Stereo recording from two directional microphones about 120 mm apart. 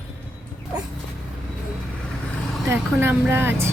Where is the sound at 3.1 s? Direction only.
15° right (ahead or behind).